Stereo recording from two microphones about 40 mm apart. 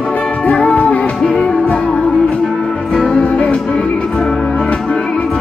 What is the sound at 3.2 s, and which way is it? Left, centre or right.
Music, left.